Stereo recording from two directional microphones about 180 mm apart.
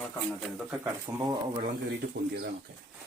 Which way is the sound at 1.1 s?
15° right (ahead or behind).